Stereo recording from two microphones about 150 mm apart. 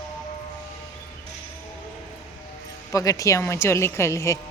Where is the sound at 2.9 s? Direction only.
20° left (ahead or behind).